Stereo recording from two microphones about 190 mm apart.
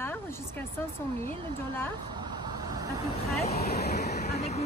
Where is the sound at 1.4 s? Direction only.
25° right (ahead or behind).